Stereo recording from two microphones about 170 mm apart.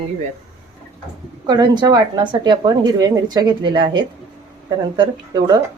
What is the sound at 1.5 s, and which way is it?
Speech, 25° right (ahead or behind).